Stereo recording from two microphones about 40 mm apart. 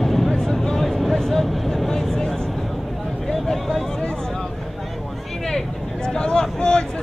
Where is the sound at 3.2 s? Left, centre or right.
Centre.